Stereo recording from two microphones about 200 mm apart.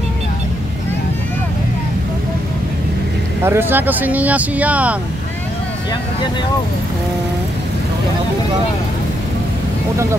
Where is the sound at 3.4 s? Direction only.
10° right (ahead or behind).